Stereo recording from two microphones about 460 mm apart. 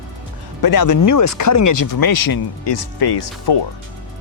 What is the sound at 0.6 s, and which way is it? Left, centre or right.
Speech, left.